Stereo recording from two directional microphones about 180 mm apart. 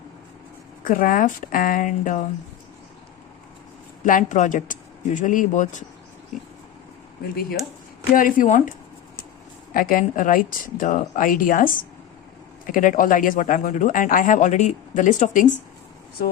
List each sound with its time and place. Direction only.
0.9 s speech: 50° left (ahead or behind)
4.0 s speech: 45° left (ahead or behind)
8.1 s speech: 50° left (ahead or behind)
9.7 s speech: 50° left (ahead or behind)